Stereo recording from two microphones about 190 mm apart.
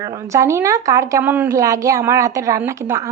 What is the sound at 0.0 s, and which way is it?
Speech, 15° right (ahead or behind).